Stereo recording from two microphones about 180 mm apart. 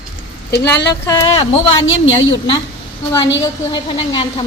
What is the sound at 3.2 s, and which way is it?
Speech, 90° left.